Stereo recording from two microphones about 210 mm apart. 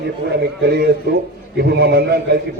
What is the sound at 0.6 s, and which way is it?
A man's voice, 50° right (ahead or behind).